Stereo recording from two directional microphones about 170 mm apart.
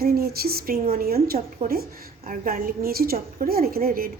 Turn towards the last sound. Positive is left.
turn(degrees=-60)  # may be behind; listen again after turning